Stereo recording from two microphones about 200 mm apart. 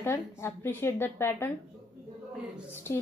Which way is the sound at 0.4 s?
10° left (ahead or behind).